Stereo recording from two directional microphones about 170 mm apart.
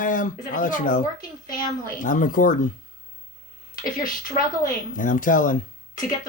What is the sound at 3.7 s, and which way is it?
Speech, 55° left (ahead or behind).